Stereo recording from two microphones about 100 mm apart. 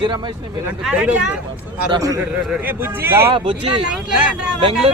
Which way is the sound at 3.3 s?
60° right (ahead or behind).